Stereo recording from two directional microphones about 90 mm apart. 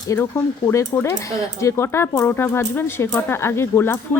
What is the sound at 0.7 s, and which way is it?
Speech, 30° left (ahead or behind).